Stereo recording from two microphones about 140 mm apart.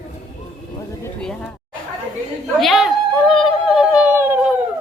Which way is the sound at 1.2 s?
5° left (ahead or behind).